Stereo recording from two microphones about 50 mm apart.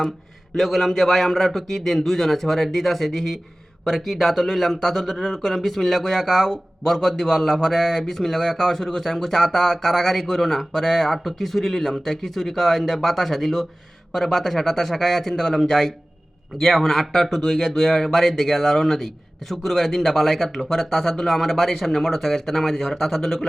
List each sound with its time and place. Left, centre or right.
0.5 s speech: centre